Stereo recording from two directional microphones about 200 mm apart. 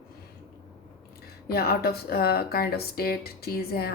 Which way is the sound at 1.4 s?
50° left (ahead or behind).